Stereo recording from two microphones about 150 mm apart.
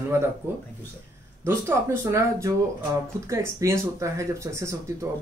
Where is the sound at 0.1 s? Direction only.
15° right (ahead or behind).